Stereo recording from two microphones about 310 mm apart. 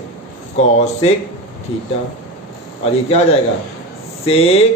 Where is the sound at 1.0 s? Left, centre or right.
Centre.